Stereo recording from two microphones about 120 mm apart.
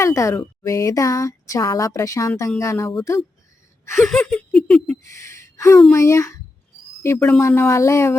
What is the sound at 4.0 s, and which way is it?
Giggle, 10° left (ahead or behind).